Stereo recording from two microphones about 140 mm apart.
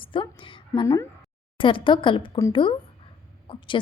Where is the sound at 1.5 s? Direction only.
35° left (ahead or behind).